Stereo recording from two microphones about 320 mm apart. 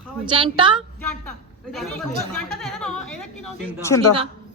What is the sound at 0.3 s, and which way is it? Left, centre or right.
Speech, centre.